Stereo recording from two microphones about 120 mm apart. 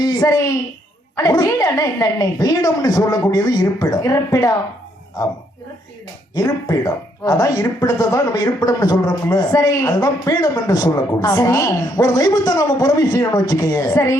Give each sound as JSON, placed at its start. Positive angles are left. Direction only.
{"t": 0.0, "sound": "a woman's voice", "side_deg": 30}
{"t": 6.3, "sound": "a woman's voice", "side_deg": 30}